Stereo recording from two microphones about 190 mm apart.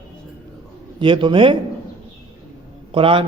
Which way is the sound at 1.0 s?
25° right (ahead or behind).